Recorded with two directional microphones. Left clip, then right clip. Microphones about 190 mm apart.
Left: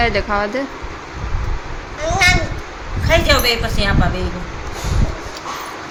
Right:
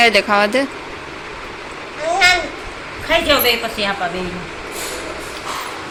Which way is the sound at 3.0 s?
70° left (ahead or behind).